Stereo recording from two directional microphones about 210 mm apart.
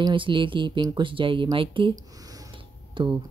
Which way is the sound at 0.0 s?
25° right (ahead or behind).